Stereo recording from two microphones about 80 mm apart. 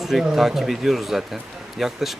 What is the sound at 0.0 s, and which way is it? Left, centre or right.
Speech, centre.